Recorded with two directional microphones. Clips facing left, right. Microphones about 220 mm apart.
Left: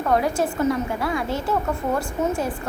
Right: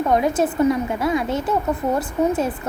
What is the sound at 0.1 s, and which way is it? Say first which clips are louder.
A woman's voice: right 1 dB; 20° right (ahead or behind).